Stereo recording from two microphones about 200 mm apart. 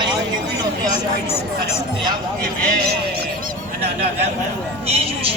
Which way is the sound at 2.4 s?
55° right (ahead or behind).